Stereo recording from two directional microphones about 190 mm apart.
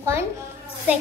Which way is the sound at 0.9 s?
10° right (ahead or behind).